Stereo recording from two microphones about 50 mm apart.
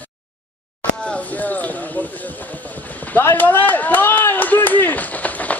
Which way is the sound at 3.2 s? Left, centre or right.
Left.